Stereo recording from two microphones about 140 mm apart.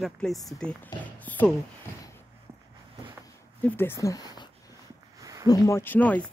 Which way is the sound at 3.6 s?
15° left (ahead or behind).